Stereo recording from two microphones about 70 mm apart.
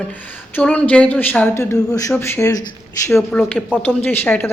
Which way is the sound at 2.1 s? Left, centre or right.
Left.